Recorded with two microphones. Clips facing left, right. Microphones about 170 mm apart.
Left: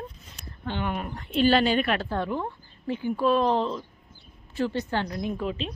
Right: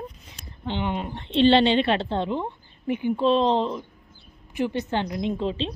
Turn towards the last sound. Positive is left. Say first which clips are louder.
# right 3 dB
turn(degrees=-25)  # may be behind; listen again after turning